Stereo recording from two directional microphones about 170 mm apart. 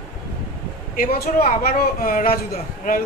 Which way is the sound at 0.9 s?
55° left (ahead or behind).